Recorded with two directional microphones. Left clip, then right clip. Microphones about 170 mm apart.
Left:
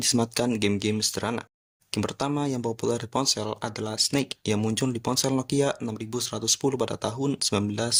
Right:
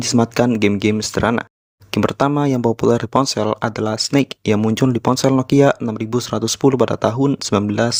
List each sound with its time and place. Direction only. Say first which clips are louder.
0.0 s speech: right 9 dB; 45° right (ahead or behind)